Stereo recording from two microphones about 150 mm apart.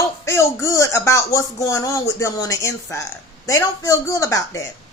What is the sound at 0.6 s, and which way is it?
A man's voice, 20° left (ahead or behind).